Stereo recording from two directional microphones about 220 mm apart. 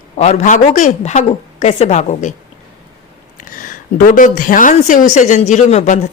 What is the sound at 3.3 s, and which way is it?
A woman's voice, 35° left (ahead or behind).